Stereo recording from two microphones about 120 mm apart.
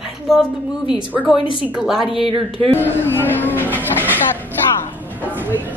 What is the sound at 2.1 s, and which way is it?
Speech, 50° right (ahead or behind).